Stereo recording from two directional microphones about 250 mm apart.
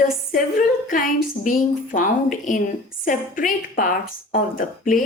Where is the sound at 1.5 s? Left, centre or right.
Left.